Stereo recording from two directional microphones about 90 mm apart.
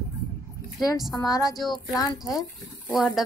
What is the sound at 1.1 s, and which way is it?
Speech, 40° left (ahead or behind).